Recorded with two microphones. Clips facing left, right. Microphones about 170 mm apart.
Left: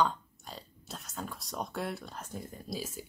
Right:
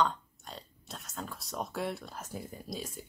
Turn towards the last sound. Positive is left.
turn(degrees=5)  # may be behind; listen again after turning